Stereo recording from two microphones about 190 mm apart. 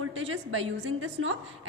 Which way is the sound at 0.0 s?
90° right.